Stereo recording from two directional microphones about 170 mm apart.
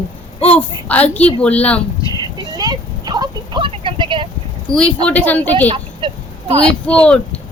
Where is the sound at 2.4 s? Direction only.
25° right (ahead or behind).